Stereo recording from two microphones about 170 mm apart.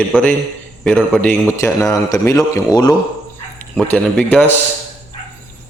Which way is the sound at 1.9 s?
15° left (ahead or behind).